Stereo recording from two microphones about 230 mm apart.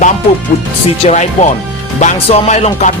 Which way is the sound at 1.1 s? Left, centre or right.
Left.